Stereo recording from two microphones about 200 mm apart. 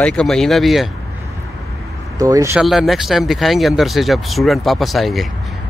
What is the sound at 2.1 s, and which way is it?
Speech, 15° right (ahead or behind).